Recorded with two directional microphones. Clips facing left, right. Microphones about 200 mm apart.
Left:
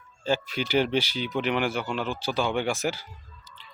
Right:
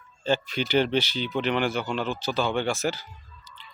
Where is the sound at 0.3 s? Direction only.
10° left (ahead or behind).